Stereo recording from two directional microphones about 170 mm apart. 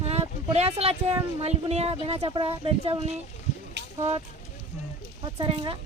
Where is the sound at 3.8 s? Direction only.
90° right.